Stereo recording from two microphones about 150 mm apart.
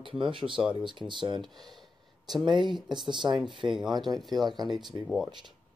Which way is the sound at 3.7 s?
Centre (ahead or behind).